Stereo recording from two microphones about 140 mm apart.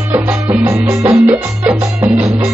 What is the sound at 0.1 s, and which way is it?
Music, 15° right (ahead or behind).